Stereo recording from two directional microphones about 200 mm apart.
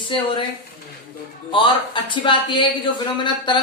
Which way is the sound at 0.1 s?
25° left (ahead or behind).